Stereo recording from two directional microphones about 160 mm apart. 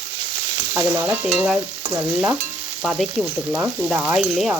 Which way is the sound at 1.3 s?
Centre (ahead or behind).